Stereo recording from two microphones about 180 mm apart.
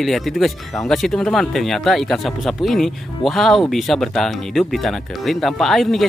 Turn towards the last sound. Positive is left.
turn(degrees=0)  # may be behind; listen again after turning